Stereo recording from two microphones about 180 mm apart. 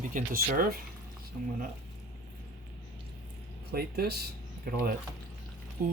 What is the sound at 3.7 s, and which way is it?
Speech, 60° right (ahead or behind).